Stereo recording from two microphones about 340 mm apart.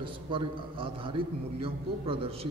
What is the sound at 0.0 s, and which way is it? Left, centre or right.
A man's voice, centre.